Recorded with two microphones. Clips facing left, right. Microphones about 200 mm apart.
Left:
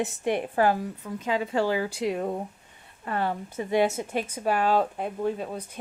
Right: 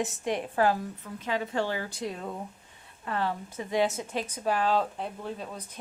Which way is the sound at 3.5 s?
60° left (ahead or behind).